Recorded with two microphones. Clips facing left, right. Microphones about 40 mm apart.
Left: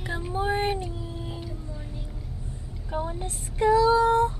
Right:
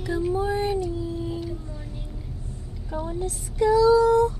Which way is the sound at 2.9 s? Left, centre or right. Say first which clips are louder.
Right 2 dB; left.